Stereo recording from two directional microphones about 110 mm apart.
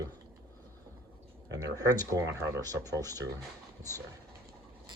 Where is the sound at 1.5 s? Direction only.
35° right (ahead or behind).